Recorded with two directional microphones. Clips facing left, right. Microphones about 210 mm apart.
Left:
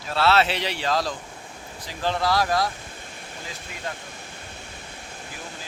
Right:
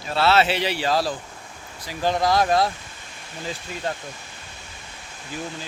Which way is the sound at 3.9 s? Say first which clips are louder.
Right 5 dB; 30° right (ahead or behind).